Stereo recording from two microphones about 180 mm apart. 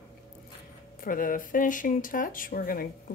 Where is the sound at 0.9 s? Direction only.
50° left (ahead or behind).